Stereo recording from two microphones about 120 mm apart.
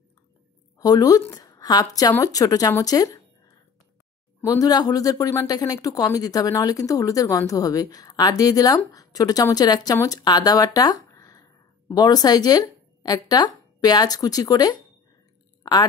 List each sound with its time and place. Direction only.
0.7 s a woman's voice: 30° left (ahead or behind)